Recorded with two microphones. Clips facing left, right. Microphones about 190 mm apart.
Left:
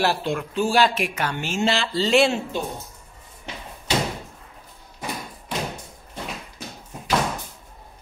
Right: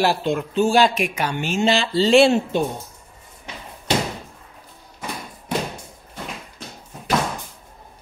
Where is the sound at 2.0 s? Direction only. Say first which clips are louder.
Right 5 dB; 30° right (ahead or behind).